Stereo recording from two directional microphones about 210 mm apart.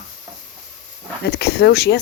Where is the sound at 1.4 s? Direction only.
50° left (ahead or behind).